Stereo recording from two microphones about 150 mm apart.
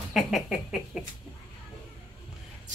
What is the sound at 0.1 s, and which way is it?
Speech, 5° right (ahead or behind).